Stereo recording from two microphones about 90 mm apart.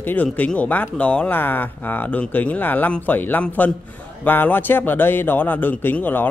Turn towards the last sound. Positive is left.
turn(degrees=20)  # may be behind; listen again after turning